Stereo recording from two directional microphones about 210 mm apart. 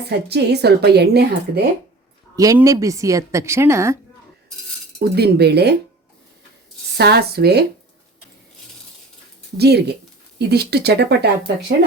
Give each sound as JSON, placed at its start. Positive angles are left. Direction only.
{"t": 0.3, "sound": "a woman's voice", "side_deg": -50}
{"t": 2.3, "sound": "a woman's voice", "side_deg": -15}
{"t": 4.9, "sound": "a woman's voice", "side_deg": -50}
{"t": 6.9, "sound": "a woman's voice", "side_deg": -50}
{"t": 9.6, "sound": "a woman's voice", "side_deg": -50}